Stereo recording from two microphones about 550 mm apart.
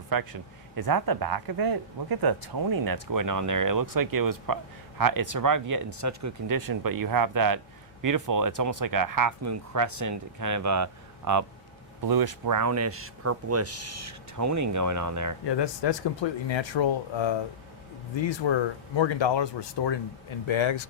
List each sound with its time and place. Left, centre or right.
0.1 s speech: right
15.4 s speech: left
18.9 s speech: left